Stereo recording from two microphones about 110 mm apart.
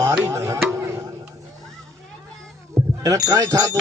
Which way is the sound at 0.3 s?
30° right (ahead or behind).